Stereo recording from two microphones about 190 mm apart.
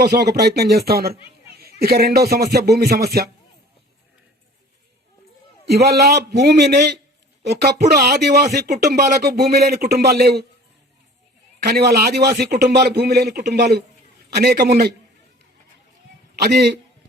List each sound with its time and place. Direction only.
0.0 s speech: 55° right (ahead or behind)
5.6 s speech: 55° right (ahead or behind)
11.6 s speech: 55° right (ahead or behind)
16.4 s speech: 60° right (ahead or behind)